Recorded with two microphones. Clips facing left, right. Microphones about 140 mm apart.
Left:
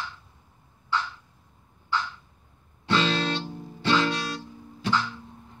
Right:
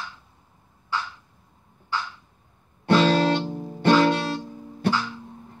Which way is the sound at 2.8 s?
55° right (ahead or behind).